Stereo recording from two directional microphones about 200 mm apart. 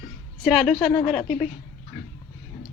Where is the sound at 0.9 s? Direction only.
25° left (ahead or behind).